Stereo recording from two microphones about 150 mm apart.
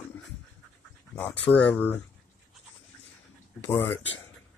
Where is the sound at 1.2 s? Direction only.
10° left (ahead or behind).